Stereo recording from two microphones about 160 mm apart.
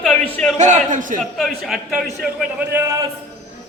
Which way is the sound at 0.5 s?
50° right (ahead or behind).